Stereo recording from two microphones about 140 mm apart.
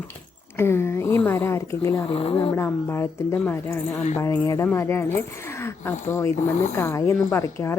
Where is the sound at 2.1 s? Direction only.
40° left (ahead or behind).